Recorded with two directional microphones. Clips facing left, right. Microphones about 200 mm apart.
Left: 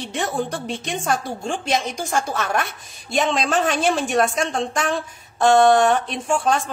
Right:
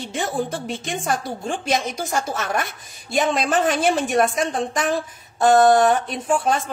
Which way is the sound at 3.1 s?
Centre (ahead or behind).